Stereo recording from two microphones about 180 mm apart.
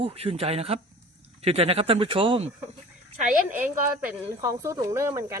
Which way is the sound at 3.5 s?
10° right (ahead or behind).